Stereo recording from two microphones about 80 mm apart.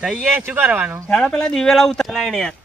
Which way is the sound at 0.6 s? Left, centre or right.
Right.